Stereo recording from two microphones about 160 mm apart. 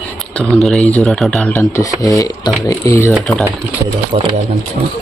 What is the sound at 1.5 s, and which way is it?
Speech, 20° left (ahead or behind).